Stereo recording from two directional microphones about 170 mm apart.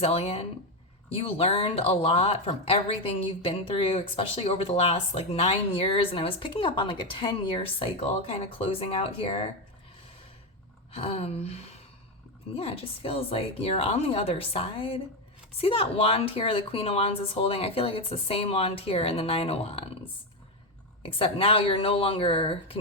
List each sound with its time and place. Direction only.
0.0 s speech: 35° left (ahead or behind)
10.9 s speech: 35° left (ahead or behind)
21.0 s speech: 30° left (ahead or behind)